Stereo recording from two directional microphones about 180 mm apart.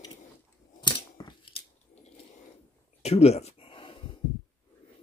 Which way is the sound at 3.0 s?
35° left (ahead or behind).